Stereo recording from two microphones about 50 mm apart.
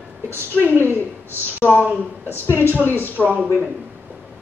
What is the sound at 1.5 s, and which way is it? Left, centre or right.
Speech, left.